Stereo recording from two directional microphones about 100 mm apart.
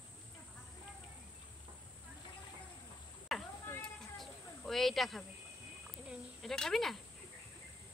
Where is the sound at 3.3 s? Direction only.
Centre (ahead or behind).